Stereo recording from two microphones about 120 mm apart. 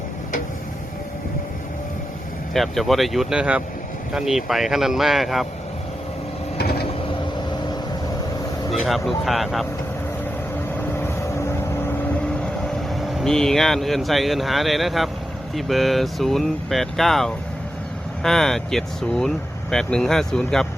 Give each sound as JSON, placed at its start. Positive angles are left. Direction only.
{"t": 2.5, "sound": "speech", "side_deg": 0}
{"t": 8.7, "sound": "speech", "side_deg": 0}
{"t": 10.9, "sound": "vehicle", "side_deg": 20}
{"t": 12.9, "sound": "speech", "side_deg": 0}